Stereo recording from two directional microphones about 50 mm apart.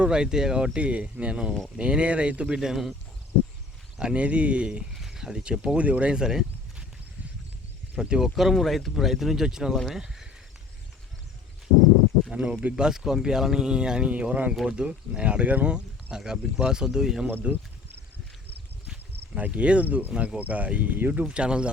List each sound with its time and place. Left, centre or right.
0.0 s speech: centre
2.6 s speech: centre
4.0 s speech: right
4.9 s speech: centre; by 6.1 s right
6.1 s a sound: centre
7.9 s speech: centre
8.4 s speech: centre
12.3 s speech: centre
17.5 s speech: right
19.4 s speech: right
21.2 s speech: right